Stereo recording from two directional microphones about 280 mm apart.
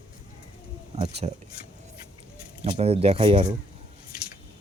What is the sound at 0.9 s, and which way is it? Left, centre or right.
Speech, right.